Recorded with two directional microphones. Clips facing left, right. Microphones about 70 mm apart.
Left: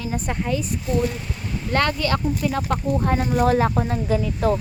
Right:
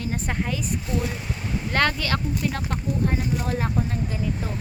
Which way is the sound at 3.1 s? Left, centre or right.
Left.